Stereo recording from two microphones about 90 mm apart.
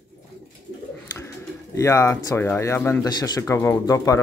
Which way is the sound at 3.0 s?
50° left (ahead or behind).